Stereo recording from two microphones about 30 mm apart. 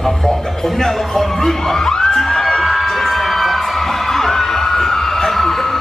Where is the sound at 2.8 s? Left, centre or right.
Centre.